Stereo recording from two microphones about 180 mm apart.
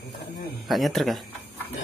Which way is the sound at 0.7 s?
Centre (ahead or behind).